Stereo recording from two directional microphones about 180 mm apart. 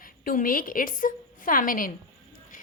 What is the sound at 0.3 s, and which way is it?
A woman's voice, 50° left (ahead or behind).